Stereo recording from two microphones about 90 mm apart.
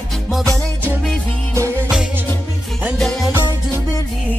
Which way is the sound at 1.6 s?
25° right (ahead or behind).